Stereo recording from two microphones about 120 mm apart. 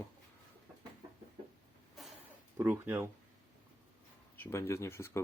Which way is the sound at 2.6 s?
15° right (ahead or behind).